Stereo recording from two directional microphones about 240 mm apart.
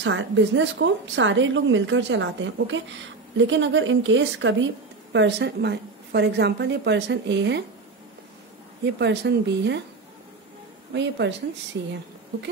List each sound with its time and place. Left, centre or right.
0.0 s a woman's voice: right
8.8 s a woman's voice: right
10.9 s a woman's voice: right